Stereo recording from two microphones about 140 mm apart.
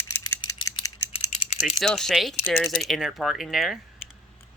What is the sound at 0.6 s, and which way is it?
Typing, 35° left (ahead or behind).